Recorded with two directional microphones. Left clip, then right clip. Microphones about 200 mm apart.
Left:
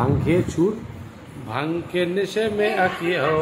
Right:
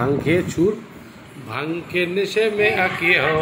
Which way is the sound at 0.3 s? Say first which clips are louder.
Right 1 dB; 15° left (ahead or behind).